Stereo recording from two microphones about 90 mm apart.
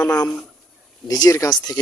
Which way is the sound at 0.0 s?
15° left (ahead or behind).